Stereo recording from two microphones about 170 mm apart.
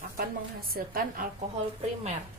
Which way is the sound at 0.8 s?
60° right (ahead or behind).